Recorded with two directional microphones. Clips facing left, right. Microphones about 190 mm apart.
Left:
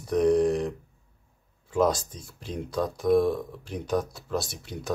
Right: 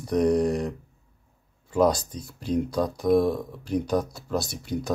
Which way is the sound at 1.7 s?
Centre (ahead or behind).